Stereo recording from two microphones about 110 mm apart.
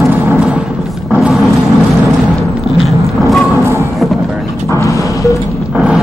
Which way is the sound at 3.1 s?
Centre (ahead or behind).